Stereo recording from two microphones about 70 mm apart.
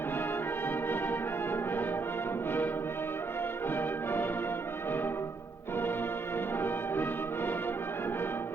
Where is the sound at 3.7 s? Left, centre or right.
Left.